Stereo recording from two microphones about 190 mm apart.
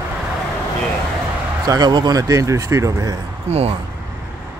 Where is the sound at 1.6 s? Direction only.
20° right (ahead or behind).